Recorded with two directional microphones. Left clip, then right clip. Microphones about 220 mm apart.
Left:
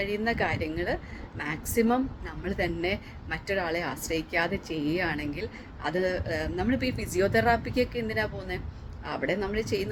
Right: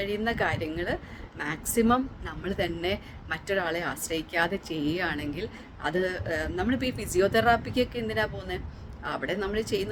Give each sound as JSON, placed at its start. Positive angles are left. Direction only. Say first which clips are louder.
{"t": 0.0, "sound": "a man's voice", "louder": "even", "side_deg": -15}